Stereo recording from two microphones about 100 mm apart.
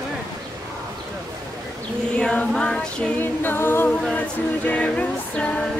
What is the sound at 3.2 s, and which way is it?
Music, 20° left (ahead or behind).